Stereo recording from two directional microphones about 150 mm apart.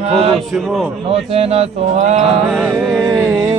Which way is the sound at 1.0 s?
40° right (ahead or behind).